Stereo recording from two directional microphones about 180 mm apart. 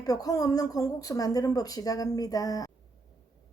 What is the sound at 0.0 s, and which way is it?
A woman's voice, 20° left (ahead or behind).